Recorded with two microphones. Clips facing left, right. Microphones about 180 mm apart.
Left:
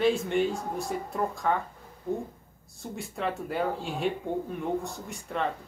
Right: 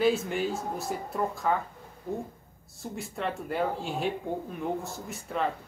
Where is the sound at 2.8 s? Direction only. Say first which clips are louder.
Left 1 dB; centre (ahead or behind).